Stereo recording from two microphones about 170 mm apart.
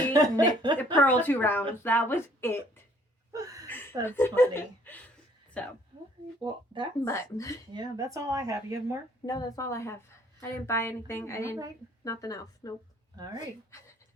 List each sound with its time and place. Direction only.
0.1 s speech: 20° right (ahead or behind)
0.9 s a woman's voice: 10° left (ahead or behind)
3.3 s a sound: 20° right (ahead or behind)
4.0 s a woman's voice: 15° left (ahead or behind)
4.9 s a sound: 10° left (ahead or behind)
5.6 s a woman's voice: 5° left (ahead or behind)
6.4 s speech: 25° right (ahead or behind)
7.0 s a woman's voice: 15° left (ahead or behind)
7.7 s speech: 25° right (ahead or behind)
9.2 s a woman's voice: 20° left (ahead or behind)
13.2 s speech: 25° right (ahead or behind)
13.7 s a sound: 15° left (ahead or behind)